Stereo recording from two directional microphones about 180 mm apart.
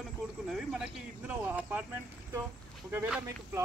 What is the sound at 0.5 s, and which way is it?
Speech, centre (ahead or behind).